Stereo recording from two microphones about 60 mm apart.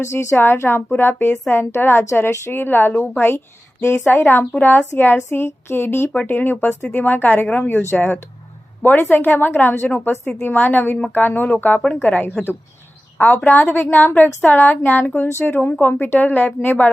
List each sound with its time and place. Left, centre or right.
0.0 s a woman's voice: left